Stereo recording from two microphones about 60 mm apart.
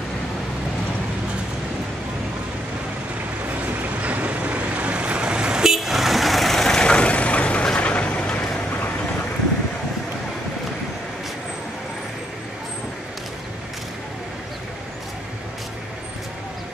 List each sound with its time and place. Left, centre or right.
4.0 s vehicle: right; by 8.5 s centre